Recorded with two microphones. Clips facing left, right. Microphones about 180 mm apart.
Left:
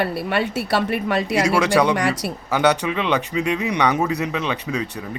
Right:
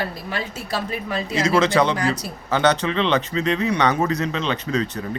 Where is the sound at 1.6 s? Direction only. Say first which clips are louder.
Right 1 dB; 15° left (ahead or behind).